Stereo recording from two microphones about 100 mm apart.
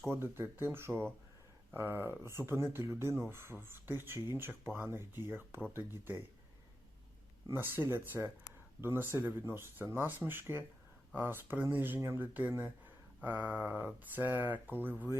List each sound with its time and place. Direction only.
0.1 s speech: 25° right (ahead or behind)
7.5 s speech: 20° right (ahead or behind)
13.2 s a sound: 20° right (ahead or behind)
13.8 s speech: 20° right (ahead or behind)